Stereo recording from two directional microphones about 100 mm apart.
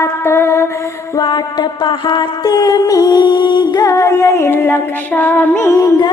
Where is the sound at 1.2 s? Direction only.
50° left (ahead or behind); by 5.9 s 25° left (ahead or behind).